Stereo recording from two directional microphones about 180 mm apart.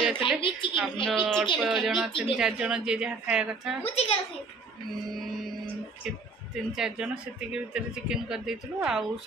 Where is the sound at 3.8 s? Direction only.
35° left (ahead or behind).